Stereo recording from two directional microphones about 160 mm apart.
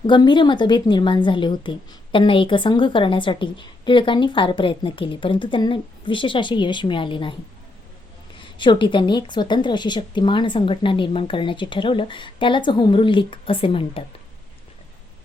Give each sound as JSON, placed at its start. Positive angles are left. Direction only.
{"t": 0.1, "sound": "a woman's voice", "side_deg": 30}
{"t": 8.4, "sound": "a woman's voice", "side_deg": 30}